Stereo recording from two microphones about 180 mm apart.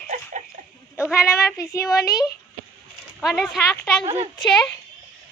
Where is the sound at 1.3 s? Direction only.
15° left (ahead or behind).